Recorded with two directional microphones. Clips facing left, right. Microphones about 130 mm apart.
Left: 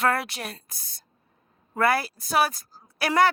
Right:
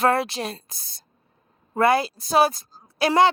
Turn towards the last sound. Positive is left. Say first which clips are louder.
# right 3 dB
turn(degrees=-25)  # may be behind; listen again after turning